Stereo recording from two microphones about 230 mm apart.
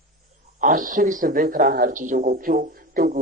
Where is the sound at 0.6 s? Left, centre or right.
Right.